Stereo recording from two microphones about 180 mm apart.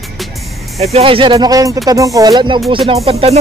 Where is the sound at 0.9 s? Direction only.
30° right (ahead or behind).